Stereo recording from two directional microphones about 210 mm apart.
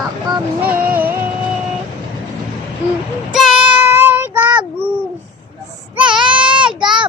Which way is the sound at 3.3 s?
Centre (ahead or behind).